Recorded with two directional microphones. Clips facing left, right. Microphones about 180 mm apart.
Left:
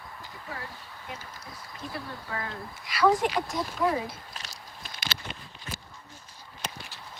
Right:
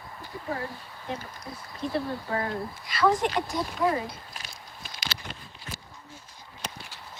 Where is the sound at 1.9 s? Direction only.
30° right (ahead or behind).